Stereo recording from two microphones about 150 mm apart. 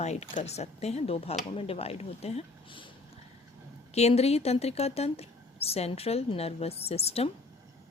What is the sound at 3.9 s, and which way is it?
Speech, 45° left (ahead or behind).